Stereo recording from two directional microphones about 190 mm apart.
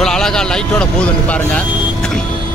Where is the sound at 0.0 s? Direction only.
5° left (ahead or behind).